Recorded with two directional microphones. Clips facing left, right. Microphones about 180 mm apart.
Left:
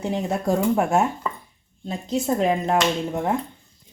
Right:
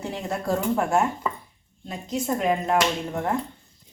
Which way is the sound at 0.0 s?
20° left (ahead or behind).